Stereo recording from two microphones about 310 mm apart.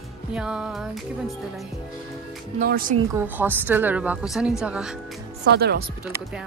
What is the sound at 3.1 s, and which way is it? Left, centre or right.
Speech, centre.